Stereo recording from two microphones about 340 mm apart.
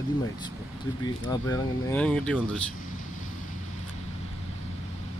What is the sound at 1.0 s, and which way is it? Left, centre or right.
Speech, centre.